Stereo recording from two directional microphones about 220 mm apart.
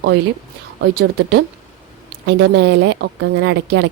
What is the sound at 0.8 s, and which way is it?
A woman's voice, 45° right (ahead or behind).